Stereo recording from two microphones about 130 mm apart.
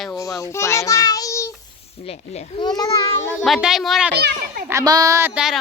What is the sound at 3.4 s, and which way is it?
Speech, centre (ahead or behind).